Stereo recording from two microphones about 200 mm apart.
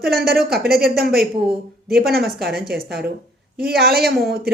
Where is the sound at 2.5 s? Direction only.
50° right (ahead or behind).